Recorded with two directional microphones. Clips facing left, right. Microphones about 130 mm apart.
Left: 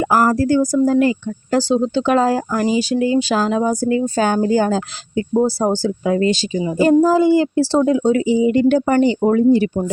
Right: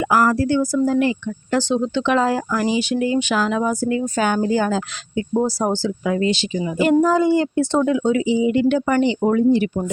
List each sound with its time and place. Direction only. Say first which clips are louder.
0.0 s speech: left 2 dB; 40° left (ahead or behind)
5.8 s speech: left 3 dB; 45° left (ahead or behind)